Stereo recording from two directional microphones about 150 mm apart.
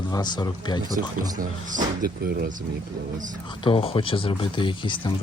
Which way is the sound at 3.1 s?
60° right (ahead or behind).